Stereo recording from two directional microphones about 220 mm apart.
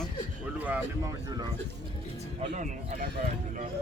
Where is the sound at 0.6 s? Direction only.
10° right (ahead or behind).